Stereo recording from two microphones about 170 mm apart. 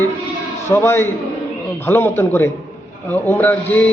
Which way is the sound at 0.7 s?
15° left (ahead or behind).